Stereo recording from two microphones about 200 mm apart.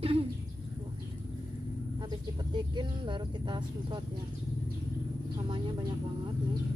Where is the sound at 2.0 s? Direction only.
20° right (ahead or behind).